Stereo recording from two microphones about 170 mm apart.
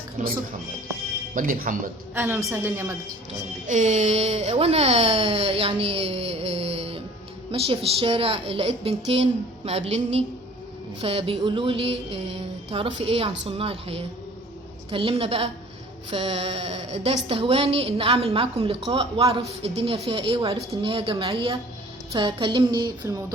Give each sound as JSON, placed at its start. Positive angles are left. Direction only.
{"t": 0.2, "sound": "speech", "side_deg": -50}
{"t": 2.1, "sound": "a woman's voice", "side_deg": -10}
{"t": 3.7, "sound": "speech", "side_deg": -45}